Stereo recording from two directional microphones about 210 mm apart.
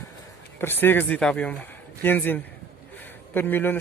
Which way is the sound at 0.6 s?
10° left (ahead or behind).